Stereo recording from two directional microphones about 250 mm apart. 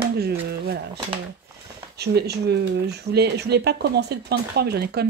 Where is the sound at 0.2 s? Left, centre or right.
Right.